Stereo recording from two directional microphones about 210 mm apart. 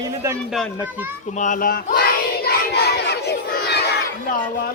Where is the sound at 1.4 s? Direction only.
40° left (ahead or behind).